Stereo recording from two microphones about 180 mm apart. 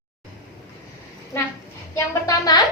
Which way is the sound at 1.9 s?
20° left (ahead or behind).